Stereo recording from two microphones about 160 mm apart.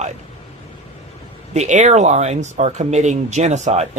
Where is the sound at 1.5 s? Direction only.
45° right (ahead or behind).